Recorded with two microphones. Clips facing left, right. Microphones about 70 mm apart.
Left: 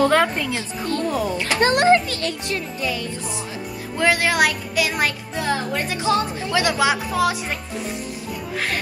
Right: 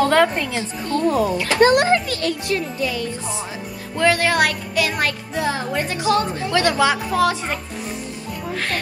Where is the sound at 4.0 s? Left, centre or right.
Centre.